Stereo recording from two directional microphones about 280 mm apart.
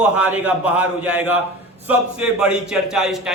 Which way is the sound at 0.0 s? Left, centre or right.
Centre.